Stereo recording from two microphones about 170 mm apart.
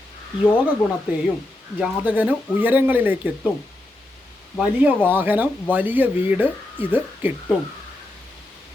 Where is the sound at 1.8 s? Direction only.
10° right (ahead or behind).